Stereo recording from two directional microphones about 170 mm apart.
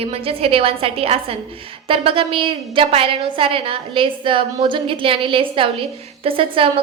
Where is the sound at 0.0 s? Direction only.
35° right (ahead or behind).